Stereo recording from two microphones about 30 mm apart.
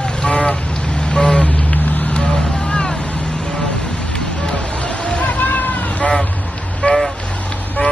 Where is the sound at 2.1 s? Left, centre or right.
Left.